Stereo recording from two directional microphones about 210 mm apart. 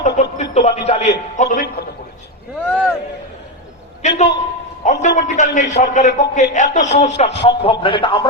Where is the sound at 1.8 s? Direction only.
45° left (ahead or behind).